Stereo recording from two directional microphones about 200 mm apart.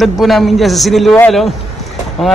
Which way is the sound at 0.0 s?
Centre (ahead or behind).